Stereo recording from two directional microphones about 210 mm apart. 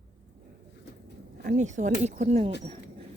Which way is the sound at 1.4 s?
35° right (ahead or behind).